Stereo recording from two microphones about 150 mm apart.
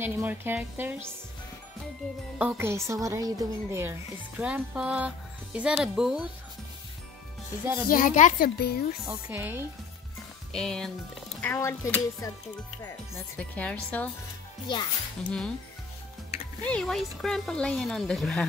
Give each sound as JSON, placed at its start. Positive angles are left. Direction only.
{"t": 0.0, "sound": "speech", "side_deg": -15}
{"t": 2.3, "sound": "a woman's voice", "side_deg": -10}
{"t": 4.4, "sound": "speech", "side_deg": -10}
{"t": 7.6, "sound": "a woman's voice", "side_deg": -20}
{"t": 7.9, "sound": "speech", "side_deg": 60}
{"t": 8.5, "sound": "speech", "side_deg": 90}
{"t": 9.0, "sound": "speech", "side_deg": -15}
{"t": 10.5, "sound": "speech", "side_deg": 5}
{"t": 11.4, "sound": "speech", "side_deg": 15}
{"t": 15.2, "sound": "speech", "side_deg": 5}
{"t": 16.6, "sound": "speech", "side_deg": 5}